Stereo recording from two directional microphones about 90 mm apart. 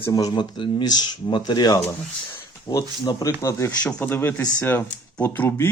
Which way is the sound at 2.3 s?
50° left (ahead or behind).